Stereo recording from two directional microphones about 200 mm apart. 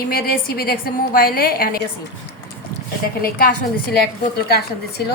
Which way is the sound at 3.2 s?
50° left (ahead or behind).